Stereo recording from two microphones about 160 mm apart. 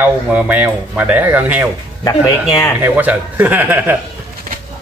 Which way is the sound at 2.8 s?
10° right (ahead or behind).